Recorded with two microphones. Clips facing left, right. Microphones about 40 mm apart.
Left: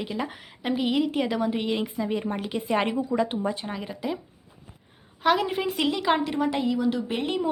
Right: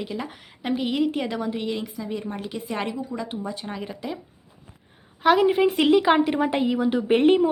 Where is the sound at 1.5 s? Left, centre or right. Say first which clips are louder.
Left 1 dB; centre.